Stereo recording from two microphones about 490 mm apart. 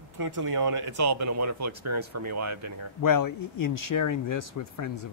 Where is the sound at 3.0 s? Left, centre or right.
Left.